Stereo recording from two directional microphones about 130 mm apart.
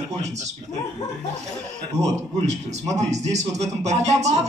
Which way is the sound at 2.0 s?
60° right (ahead or behind).